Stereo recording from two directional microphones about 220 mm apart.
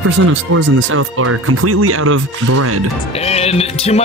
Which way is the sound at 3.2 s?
30° left (ahead or behind).